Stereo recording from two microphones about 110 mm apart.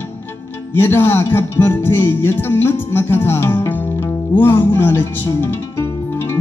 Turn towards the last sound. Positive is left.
turn(degrees=25)  # may be behind; listen again after turning